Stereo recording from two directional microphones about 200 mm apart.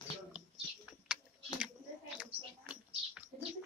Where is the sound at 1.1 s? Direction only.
5° right (ahead or behind).